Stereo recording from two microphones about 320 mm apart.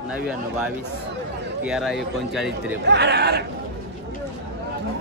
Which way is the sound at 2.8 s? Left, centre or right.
Right.